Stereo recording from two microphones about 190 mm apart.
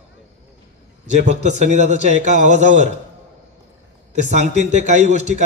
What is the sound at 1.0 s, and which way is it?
A man's voice, 35° right (ahead or behind).